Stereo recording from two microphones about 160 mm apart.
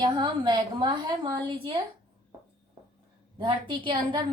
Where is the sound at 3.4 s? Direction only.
30° right (ahead or behind).